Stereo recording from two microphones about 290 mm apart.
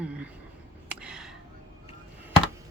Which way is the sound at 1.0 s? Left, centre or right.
Centre.